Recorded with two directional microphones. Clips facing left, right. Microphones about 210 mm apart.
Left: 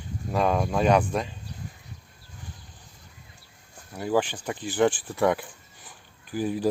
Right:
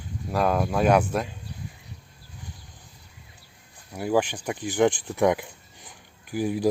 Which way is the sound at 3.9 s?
10° right (ahead or behind).